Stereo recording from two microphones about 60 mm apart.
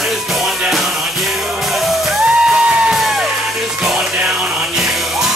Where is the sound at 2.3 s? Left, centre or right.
Centre.